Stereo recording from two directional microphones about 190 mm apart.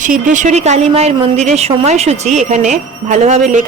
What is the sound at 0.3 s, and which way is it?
A woman's voice, 40° right (ahead or behind).